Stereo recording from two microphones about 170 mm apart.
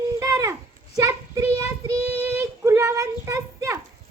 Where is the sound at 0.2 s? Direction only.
20° right (ahead or behind).